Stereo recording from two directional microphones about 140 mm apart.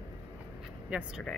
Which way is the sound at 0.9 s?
10° right (ahead or behind).